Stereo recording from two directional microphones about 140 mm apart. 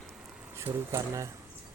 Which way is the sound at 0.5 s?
20° right (ahead or behind).